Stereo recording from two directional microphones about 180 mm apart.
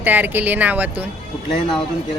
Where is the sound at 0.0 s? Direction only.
10° right (ahead or behind).